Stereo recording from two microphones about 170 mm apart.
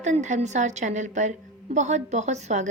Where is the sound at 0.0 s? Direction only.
45° right (ahead or behind).